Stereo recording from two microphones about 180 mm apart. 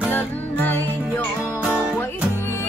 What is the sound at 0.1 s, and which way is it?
Music, 10° left (ahead or behind).